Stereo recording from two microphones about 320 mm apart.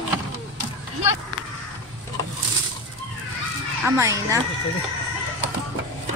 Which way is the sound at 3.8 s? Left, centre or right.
Centre.